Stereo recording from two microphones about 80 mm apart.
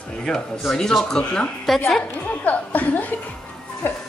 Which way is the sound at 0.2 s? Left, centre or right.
Centre.